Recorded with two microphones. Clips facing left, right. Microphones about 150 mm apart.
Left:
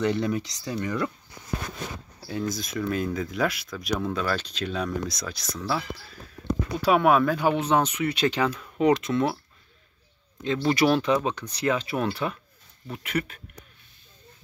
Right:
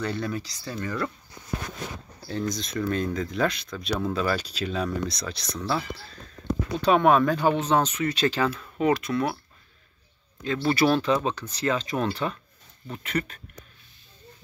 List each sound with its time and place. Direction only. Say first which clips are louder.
0.0 s speech: left 4 dB; 20° left (ahead or behind)
2.2 s speech: even; 5° left (ahead or behind)
6.8 s speech: right 1 dB; 10° left (ahead or behind); by 9.4 s 25° left (ahead or behind)
10.4 s speech: even; 20° left (ahead or behind)